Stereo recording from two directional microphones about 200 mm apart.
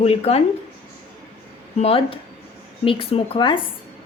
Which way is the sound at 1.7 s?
30° left (ahead or behind).